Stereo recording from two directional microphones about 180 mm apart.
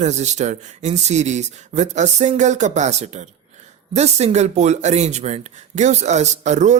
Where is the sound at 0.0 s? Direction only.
40° right (ahead or behind).